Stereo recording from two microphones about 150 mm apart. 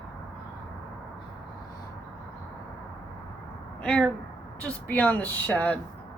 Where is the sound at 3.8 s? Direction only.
5° left (ahead or behind).